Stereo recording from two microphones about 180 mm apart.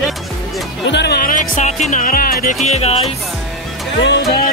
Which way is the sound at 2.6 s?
35° left (ahead or behind).